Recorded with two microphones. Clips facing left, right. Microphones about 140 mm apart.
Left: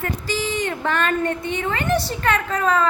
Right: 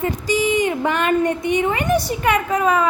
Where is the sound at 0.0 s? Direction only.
15° right (ahead or behind).